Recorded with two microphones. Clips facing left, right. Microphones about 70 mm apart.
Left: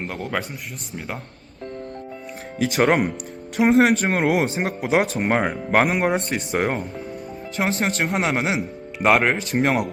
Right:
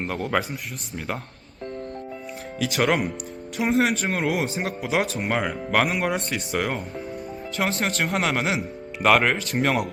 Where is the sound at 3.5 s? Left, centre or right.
Left.